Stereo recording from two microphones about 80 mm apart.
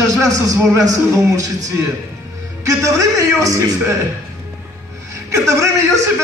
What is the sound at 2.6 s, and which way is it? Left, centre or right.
A woman's voice, right.